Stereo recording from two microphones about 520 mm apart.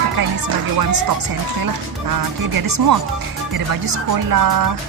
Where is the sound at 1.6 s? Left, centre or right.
Right.